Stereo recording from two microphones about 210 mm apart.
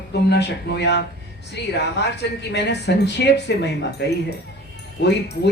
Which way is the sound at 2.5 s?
55° left (ahead or behind).